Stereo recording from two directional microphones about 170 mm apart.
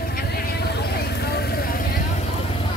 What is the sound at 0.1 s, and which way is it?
Vehicle, 65° left (ahead or behind).